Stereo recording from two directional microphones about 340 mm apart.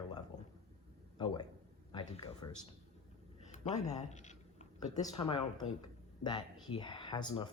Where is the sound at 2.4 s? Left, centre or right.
Centre.